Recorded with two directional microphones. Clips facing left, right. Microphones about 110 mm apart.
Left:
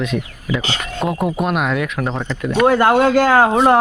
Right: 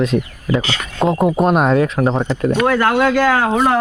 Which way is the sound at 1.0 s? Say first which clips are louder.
Right 5 dB; 25° right (ahead or behind).